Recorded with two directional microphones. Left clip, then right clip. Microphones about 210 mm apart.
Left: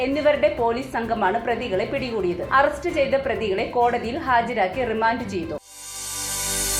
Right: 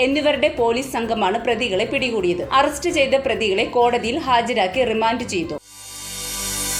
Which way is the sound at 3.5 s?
55° right (ahead or behind).